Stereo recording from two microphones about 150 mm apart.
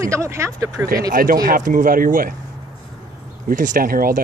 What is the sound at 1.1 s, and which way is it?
Speech, 65° right (ahead or behind).